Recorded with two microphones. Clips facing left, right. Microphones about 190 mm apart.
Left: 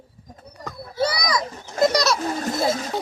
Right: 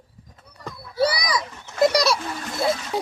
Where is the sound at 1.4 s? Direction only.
35° left (ahead or behind).